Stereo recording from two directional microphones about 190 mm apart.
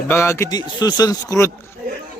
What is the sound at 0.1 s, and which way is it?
Speech, 15° left (ahead or behind).